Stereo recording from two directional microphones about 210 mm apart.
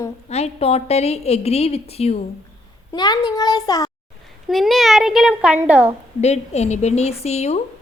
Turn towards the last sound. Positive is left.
turn(degrees=30)  # may be behind; listen again after turning